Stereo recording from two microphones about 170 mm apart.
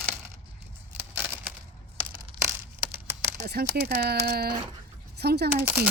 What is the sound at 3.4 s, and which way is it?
Speech, 70° right (ahead or behind).